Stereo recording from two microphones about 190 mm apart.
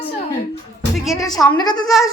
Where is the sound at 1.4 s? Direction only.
20° left (ahead or behind).